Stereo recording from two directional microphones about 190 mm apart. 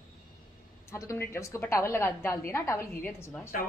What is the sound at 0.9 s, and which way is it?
A woman's voice, 15° left (ahead or behind).